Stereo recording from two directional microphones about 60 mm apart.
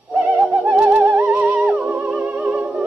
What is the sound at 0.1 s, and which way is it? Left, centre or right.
Bird, right.